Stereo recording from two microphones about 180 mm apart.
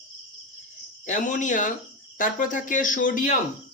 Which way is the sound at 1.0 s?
45° left (ahead or behind).